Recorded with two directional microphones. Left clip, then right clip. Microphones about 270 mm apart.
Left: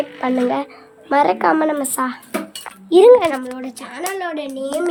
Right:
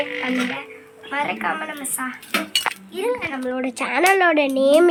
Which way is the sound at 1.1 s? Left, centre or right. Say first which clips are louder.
Left 9 dB; centre.